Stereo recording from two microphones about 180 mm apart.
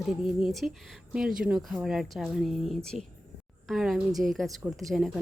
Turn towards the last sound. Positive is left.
turn(degrees=0)  # may be behind; listen again after turning